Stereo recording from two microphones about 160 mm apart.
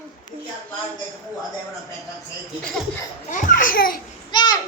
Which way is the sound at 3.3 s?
50° left (ahead or behind).